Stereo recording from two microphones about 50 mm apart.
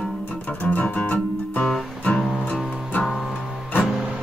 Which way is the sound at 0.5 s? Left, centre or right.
Left.